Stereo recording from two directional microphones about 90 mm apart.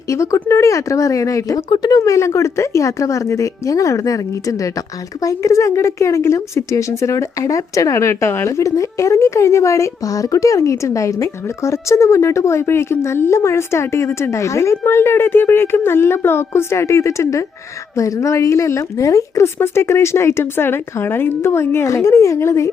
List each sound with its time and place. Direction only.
0.1 s speech: 35° left (ahead or behind)
1.7 s speech: 50° left (ahead or behind)
2.0 s speech: 35° left (ahead or behind)